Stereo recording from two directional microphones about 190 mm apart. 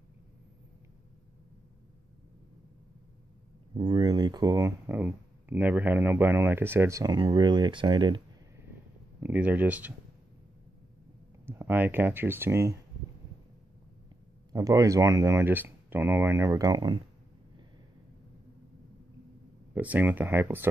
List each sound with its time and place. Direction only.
3.7 s speech: 25° right (ahead or behind)
9.2 s speech: 10° right (ahead or behind)
11.4 s speech: 10° right (ahead or behind)
14.5 s speech: 15° right (ahead or behind)
19.7 s speech: 10° right (ahead or behind)